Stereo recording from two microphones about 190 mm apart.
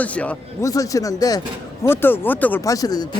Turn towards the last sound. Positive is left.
turn(degrees=20)  # may be behind; listen again after turning